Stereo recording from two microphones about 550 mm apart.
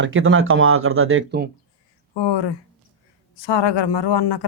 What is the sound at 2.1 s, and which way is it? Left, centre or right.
Speech, left.